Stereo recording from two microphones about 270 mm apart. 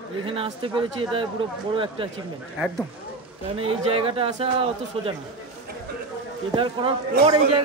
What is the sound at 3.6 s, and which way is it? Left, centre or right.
Speech, right.